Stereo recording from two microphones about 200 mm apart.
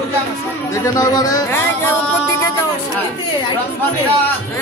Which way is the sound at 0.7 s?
15° left (ahead or behind).